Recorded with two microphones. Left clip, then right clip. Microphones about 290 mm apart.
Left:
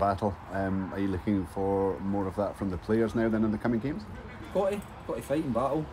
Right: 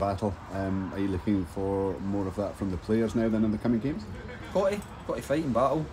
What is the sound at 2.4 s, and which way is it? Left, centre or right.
Speech, centre.